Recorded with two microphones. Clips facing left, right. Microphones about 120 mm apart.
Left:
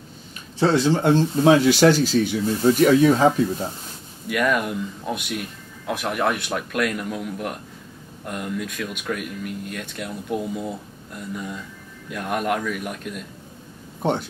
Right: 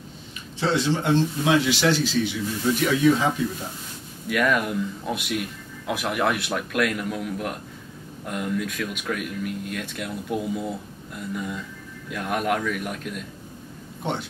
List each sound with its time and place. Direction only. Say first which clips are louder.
0.6 s speech: left 5 dB; 40° left (ahead or behind)
4.3 s speech: left 1 dB; centre (ahead or behind)